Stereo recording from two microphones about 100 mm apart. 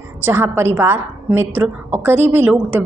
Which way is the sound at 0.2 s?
20° right (ahead or behind).